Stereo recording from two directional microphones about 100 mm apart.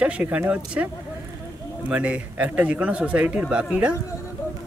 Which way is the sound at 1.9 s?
15° right (ahead or behind).